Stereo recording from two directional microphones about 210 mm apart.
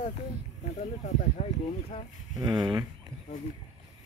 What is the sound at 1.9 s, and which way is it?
Speech, 30° left (ahead or behind).